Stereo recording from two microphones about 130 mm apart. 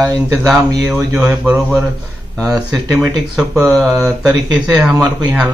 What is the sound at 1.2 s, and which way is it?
Mantra, 5° right (ahead or behind).